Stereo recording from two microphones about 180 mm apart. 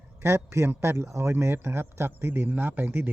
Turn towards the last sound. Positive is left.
turn(degrees=-10)  # may be behind; listen again after turning